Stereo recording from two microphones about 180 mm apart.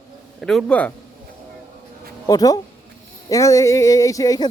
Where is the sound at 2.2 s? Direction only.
20° left (ahead or behind).